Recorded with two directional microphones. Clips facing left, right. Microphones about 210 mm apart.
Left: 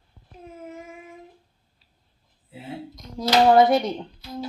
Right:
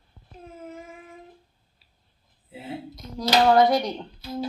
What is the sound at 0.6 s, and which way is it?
Child singing, centre (ahead or behind).